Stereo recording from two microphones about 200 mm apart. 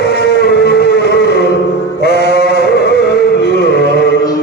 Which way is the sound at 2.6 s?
55° left (ahead or behind).